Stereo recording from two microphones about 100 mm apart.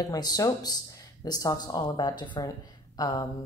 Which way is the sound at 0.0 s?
40° left (ahead or behind).